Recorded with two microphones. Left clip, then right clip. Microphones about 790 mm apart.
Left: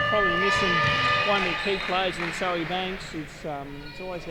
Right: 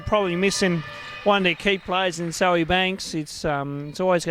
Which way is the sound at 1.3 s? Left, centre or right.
Right.